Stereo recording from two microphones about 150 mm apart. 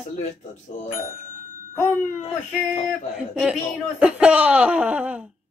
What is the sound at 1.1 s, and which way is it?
Bicycle bell, 65° left (ahead or behind).